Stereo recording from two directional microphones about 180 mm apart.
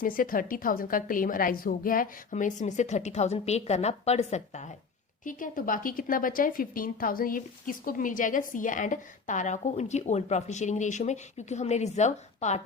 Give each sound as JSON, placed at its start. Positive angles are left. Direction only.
{"t": 0.0, "sound": "a woman's voice", "side_deg": 50}